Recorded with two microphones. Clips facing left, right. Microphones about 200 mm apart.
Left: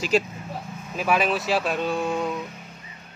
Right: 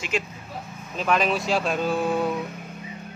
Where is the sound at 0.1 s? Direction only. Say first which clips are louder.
Left 6 dB; 35° left (ahead or behind).